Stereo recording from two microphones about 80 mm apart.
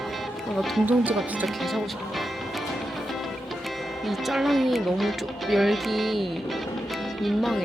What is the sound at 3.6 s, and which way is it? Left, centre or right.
Speech, centre.